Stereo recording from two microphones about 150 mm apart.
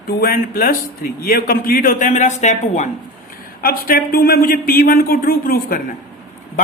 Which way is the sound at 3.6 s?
75° left (ahead or behind).